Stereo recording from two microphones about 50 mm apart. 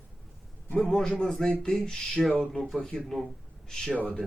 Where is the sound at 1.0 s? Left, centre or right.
Centre.